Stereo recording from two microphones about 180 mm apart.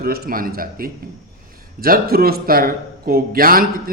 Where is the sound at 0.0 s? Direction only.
55° right (ahead or behind).